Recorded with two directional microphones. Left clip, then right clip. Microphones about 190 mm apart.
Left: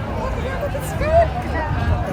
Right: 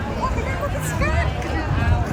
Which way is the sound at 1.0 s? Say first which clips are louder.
Left 10 dB; 45° left (ahead or behind).